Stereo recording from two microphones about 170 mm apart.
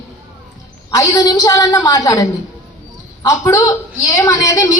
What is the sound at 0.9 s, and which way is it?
Speech, 20° left (ahead or behind).